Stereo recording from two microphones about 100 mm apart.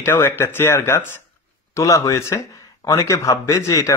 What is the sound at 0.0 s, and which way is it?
Speech, 25° left (ahead or behind).